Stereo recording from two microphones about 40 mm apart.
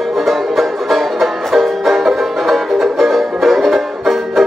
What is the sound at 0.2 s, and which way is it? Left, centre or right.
Music, centre.